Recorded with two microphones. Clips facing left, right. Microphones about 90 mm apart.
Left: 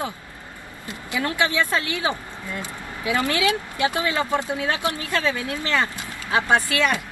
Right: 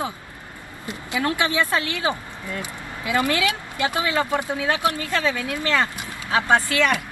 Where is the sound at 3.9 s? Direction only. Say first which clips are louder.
Right 1 dB; 20° right (ahead or behind).